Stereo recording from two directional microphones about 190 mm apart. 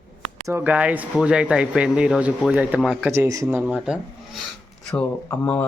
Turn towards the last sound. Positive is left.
turn(degrees=10)  # may be behind; listen again after turning